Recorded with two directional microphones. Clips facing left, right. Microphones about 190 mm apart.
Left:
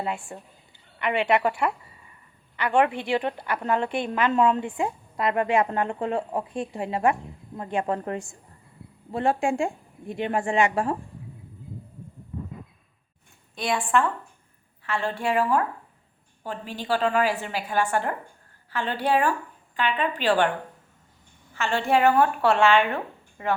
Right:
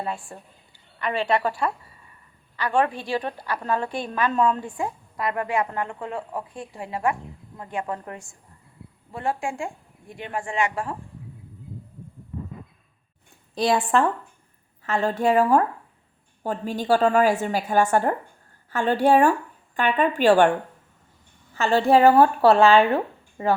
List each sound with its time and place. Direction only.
0.0 s a woman's voice: 20° left (ahead or behind)
13.6 s a woman's voice: 35° right (ahead or behind)
14.8 s a woman's voice: 40° right (ahead or behind)
21.5 s a woman's voice: 35° right (ahead or behind)